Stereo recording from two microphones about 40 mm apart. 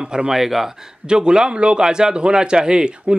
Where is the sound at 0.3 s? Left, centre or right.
Centre.